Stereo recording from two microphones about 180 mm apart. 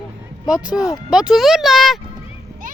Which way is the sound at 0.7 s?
20° left (ahead or behind).